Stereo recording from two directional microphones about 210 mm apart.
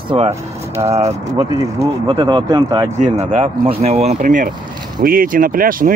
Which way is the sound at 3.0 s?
35° right (ahead or behind).